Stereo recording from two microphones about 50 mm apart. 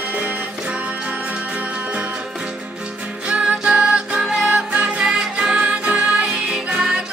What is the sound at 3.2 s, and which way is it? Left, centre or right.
Music, right.